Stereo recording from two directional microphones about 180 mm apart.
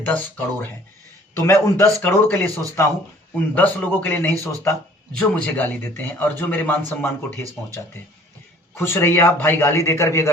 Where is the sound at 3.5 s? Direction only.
10° left (ahead or behind).